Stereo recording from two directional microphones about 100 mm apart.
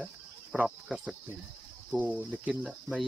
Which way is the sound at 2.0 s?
15° right (ahead or behind).